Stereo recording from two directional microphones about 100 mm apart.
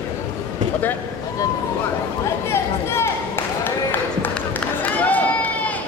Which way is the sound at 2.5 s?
25° left (ahead or behind).